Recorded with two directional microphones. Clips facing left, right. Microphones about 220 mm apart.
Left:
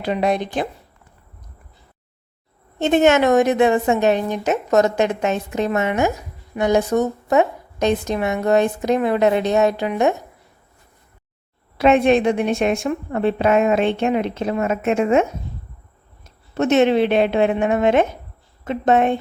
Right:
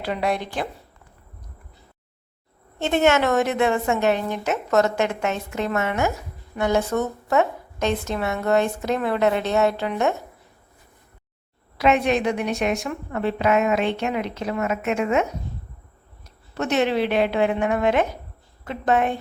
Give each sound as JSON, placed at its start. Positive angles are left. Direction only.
{"t": 0.0, "sound": "a woman's voice", "side_deg": 20}
{"t": 2.7, "sound": "a woman's voice", "side_deg": 20}
{"t": 11.8, "sound": "a woman's voice", "side_deg": 25}